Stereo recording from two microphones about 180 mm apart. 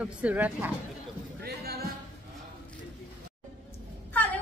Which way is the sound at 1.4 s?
60° right (ahead or behind).